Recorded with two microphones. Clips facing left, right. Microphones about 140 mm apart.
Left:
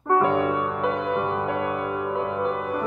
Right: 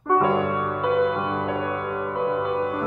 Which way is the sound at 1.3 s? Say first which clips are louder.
Even; 5° left (ahead or behind).